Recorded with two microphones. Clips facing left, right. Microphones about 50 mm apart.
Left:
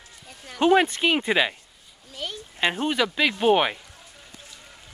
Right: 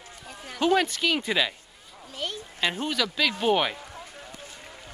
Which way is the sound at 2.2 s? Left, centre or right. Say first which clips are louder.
Right 1 dB; centre.